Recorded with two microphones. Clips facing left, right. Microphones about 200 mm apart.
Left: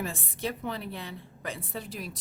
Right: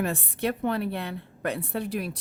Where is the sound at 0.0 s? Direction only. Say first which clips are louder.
Right 6 dB; 60° right (ahead or behind).